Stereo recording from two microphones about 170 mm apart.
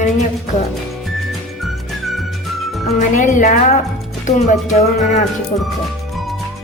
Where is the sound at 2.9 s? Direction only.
45° left (ahead or behind).